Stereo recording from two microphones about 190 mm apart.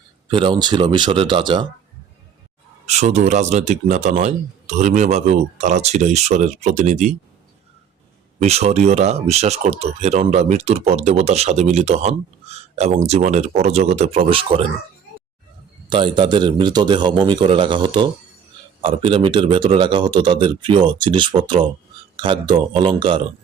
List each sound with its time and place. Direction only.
0.3 s a man's voice: 25° right (ahead or behind)
2.8 s speech: 35° right (ahead or behind)
8.4 s speech: 35° right (ahead or behind)
15.9 s a man's voice: 25° right (ahead or behind)